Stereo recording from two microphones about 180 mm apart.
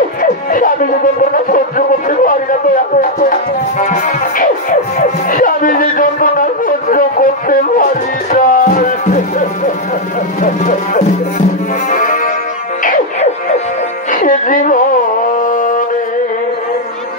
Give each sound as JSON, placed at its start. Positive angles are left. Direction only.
{"t": 0.2, "sound": "music", "side_deg": 50}
{"t": 1.3, "sound": "speech", "side_deg": 50}
{"t": 3.8, "sound": "music", "side_deg": 45}
{"t": 10.4, "sound": "speech", "side_deg": 45}
{"t": 11.9, "sound": "music", "side_deg": 45}
{"t": 15.4, "sound": "a sound", "side_deg": 50}